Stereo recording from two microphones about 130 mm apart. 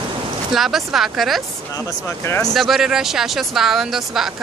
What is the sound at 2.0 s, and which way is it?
Speech, 20° left (ahead or behind).